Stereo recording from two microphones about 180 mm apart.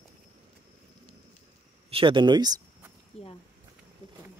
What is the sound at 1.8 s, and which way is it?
Speech, 30° right (ahead or behind).